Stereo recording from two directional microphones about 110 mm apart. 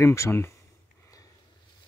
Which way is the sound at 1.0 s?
35° left (ahead or behind).